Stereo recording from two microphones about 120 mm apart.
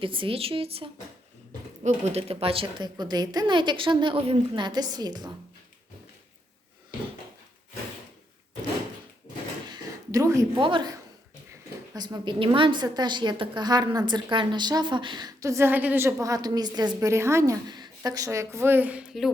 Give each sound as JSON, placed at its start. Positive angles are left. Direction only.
{"t": 0.0, "sound": "a woman's voice", "side_deg": -45}
{"t": 9.6, "sound": "a sound", "side_deg": -35}
{"t": 10.5, "sound": "a woman's voice", "side_deg": -40}
{"t": 11.9, "sound": "a woman's voice", "side_deg": -35}